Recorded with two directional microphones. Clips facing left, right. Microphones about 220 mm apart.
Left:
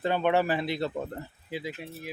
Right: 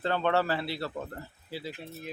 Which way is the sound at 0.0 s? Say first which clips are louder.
Left 2 dB; 15° left (ahead or behind).